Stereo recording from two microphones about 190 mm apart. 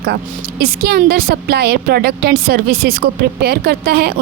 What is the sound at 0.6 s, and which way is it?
A woman's voice, 55° right (ahead or behind).